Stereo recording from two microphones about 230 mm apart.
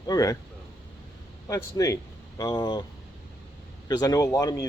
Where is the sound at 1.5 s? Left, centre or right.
Centre.